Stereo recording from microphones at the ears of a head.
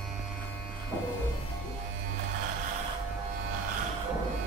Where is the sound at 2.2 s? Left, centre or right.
Right.